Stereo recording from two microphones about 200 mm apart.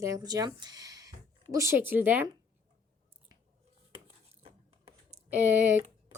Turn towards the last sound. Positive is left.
turn(degrees=-10)  # may be behind; listen again after turning